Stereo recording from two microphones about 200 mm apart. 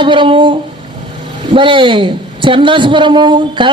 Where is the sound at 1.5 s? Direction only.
25° right (ahead or behind).